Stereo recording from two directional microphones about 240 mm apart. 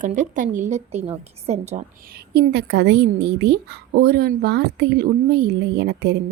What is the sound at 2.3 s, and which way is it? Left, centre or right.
A woman's voice, right.